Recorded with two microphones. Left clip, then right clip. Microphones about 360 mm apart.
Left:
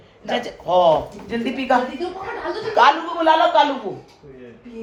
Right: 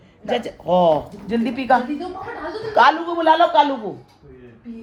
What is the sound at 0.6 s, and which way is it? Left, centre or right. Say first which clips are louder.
Speech: left 1 dB; right.